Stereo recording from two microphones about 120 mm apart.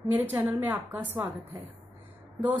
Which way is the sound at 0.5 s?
15° right (ahead or behind).